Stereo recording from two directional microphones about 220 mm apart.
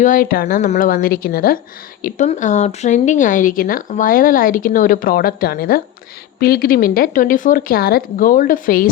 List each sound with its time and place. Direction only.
0.0 s speech: 40° left (ahead or behind)